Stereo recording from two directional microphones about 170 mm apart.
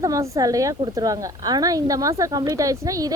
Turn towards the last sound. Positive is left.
turn(degrees=-20)  # may be behind; listen again after turning